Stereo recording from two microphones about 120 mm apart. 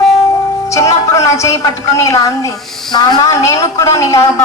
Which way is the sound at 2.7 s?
5° left (ahead or behind).